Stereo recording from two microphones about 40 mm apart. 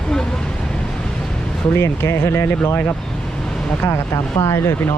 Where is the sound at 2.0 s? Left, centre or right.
Left.